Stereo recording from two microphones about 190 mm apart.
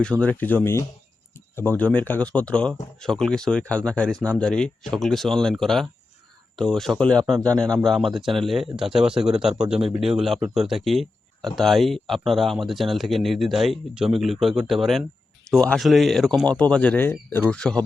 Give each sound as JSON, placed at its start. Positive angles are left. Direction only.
{"t": 0.0, "sound": "speech", "side_deg": 5}